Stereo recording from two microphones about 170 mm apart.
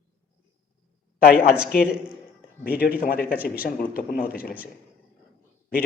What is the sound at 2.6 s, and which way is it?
Speech, 60° left (ahead or behind).